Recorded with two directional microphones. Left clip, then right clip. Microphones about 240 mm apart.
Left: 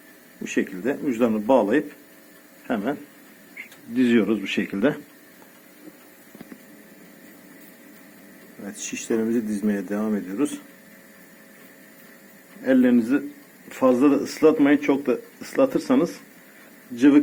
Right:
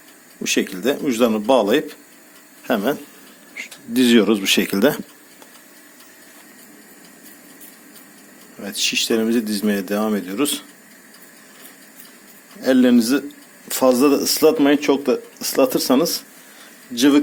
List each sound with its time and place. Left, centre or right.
0.4 s speech: right
8.6 s a man's voice: right
12.6 s speech: right
14.3 s a man's voice: right